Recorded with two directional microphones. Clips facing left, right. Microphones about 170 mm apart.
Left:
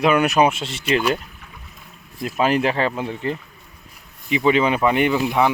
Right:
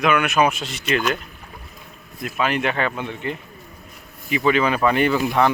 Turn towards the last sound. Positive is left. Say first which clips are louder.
# even
turn(degrees=15)  # may be behind; listen again after turning